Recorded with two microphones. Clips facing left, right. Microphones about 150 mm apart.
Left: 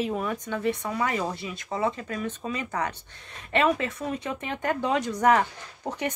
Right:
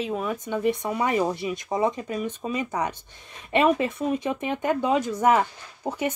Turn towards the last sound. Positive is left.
turn(degrees=0)  # may be behind; listen again after turning